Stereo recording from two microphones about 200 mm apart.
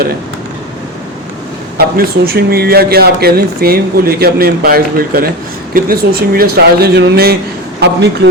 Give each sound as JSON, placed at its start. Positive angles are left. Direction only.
{"t": 2.0, "sound": "a man's voice", "side_deg": -50}